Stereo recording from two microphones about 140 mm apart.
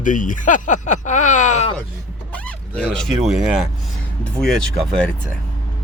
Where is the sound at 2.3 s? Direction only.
10° left (ahead or behind).